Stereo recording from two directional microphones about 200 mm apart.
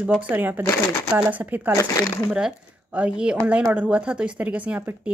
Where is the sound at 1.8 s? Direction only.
15° left (ahead or behind).